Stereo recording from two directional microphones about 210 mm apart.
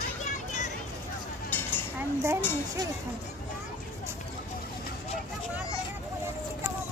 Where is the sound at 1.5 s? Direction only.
10° left (ahead or behind).